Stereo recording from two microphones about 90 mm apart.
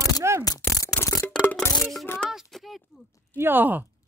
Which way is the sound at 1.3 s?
15° left (ahead or behind).